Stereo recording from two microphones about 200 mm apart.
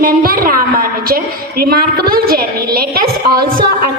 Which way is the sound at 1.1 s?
50° right (ahead or behind).